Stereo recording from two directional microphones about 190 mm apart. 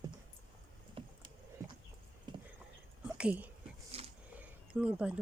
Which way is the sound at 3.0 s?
5° right (ahead or behind).